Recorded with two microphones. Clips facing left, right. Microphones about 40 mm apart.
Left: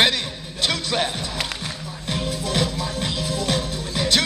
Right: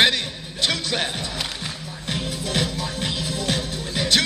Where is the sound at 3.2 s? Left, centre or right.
Right.